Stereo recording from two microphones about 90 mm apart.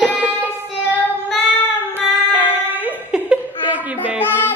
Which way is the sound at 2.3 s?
20° right (ahead or behind).